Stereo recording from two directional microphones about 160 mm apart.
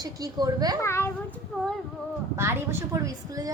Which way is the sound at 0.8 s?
15° left (ahead or behind).